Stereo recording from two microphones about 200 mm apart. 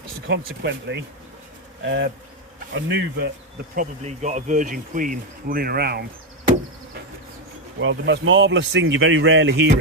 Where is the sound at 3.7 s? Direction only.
35° right (ahead or behind); by 6.0 s 50° right (ahead or behind).